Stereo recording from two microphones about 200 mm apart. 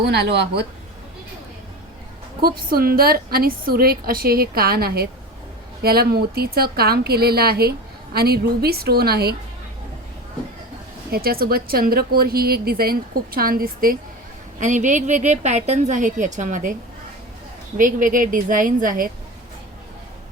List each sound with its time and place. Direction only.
0.0 s speech: 55° right (ahead or behind)
2.4 s a woman's voice: 50° right (ahead or behind)
11.1 s a woman's voice: 50° right (ahead or behind)
17.7 s a woman's voice: 40° right (ahead or behind)